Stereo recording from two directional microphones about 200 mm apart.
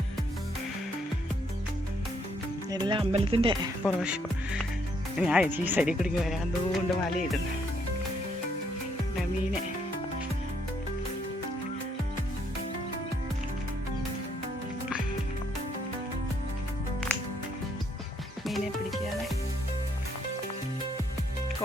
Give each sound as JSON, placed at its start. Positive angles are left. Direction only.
{"t": 2.6, "sound": "speech", "side_deg": -20}
{"t": 3.8, "sound": "speech", "side_deg": -5}
{"t": 18.4, "sound": "music", "side_deg": 0}